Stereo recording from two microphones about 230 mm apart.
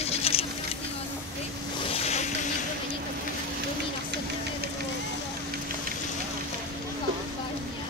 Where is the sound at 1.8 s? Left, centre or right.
Left.